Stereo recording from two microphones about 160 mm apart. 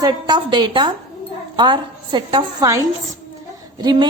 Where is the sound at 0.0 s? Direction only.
25° right (ahead or behind).